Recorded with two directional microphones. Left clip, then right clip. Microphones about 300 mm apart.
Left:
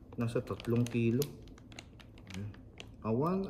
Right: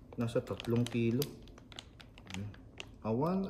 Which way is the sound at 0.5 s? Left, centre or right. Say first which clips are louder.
Left 1 dB; centre.